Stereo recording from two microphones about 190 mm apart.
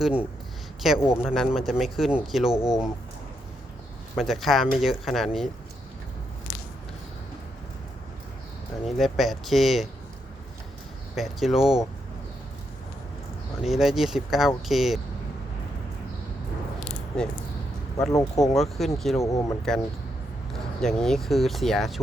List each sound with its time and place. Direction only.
0.0 s speech: 5° right (ahead or behind)
4.1 s speech: centre (ahead or behind)
9.0 s speech: centre (ahead or behind)
11.1 s speech: centre (ahead or behind)
13.6 s speech: centre (ahead or behind)
18.1 s speech: 20° left (ahead or behind)
18.5 s speech: centre (ahead or behind)
19.2 s speech: 15° left (ahead or behind)
20.5 s speech: 5° left (ahead or behind)